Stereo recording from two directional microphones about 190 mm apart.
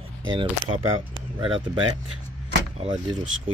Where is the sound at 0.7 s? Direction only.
25° right (ahead or behind).